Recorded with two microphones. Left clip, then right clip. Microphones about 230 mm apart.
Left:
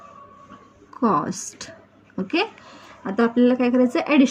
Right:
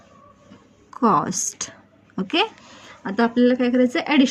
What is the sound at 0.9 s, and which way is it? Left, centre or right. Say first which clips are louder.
A woman's voice: right 3 dB; right.